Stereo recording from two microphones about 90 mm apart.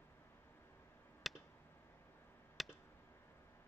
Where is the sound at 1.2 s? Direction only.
Centre (ahead or behind).